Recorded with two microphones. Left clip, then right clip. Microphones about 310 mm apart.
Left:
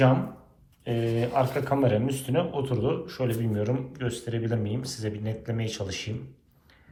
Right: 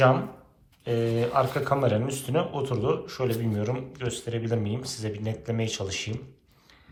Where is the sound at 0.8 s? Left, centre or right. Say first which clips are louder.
Right 2 dB; centre.